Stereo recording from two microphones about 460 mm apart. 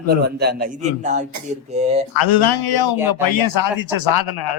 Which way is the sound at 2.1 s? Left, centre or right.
Left.